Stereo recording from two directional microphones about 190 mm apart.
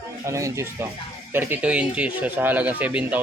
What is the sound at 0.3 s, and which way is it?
Speech, 15° right (ahead or behind).